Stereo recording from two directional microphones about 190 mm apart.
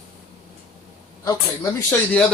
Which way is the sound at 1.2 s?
20° left (ahead or behind).